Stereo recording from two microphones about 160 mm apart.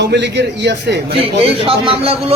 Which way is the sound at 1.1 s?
35° right (ahead or behind).